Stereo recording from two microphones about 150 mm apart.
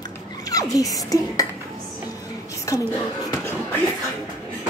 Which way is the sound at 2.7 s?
20° left (ahead or behind).